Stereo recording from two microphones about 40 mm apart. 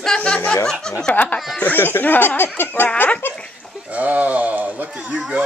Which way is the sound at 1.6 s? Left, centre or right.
Left.